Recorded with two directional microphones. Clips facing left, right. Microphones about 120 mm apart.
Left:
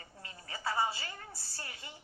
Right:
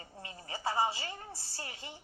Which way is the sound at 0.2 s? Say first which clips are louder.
Right 3 dB; 25° right (ahead or behind).